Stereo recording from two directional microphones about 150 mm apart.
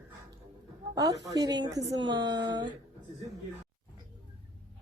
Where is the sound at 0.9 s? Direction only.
25° right (ahead or behind).